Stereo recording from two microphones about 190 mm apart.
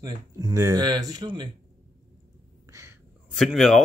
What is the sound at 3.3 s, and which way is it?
Speech, centre (ahead or behind).